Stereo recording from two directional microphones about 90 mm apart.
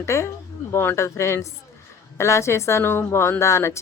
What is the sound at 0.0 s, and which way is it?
A woman's voice, 30° left (ahead or behind).